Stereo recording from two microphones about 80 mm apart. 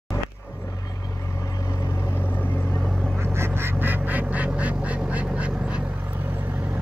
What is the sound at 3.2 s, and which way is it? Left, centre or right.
Quack, right.